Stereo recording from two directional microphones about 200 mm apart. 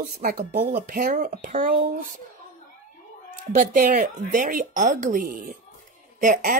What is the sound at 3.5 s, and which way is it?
Speech, 45° right (ahead or behind).